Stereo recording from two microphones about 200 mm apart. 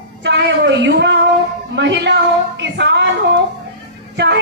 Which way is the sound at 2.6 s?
60° right (ahead or behind).